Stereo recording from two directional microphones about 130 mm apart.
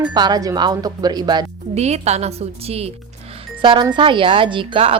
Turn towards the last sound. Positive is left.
turn(degrees=-45)  # may be behind; listen again after turning